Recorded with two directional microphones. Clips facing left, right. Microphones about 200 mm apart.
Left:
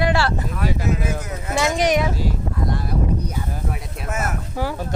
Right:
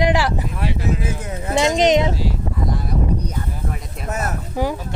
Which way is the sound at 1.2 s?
30° right (ahead or behind).